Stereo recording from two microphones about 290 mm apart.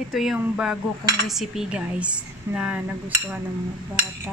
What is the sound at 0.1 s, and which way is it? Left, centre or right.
Speech, centre.